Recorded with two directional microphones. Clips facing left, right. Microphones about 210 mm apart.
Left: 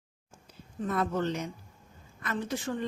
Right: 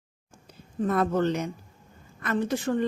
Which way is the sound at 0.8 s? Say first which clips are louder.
Right 6 dB; 55° right (ahead or behind).